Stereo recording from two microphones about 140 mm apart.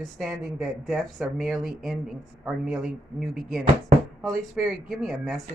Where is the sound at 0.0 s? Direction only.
5° right (ahead or behind).